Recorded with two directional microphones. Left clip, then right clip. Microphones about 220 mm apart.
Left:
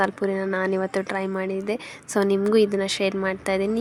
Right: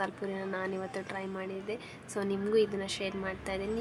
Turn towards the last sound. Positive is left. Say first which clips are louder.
# left 12 dB
turn(degrees=40)  # may be behind; listen again after turning